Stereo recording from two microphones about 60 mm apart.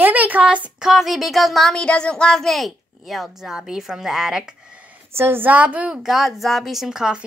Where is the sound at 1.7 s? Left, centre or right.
Centre.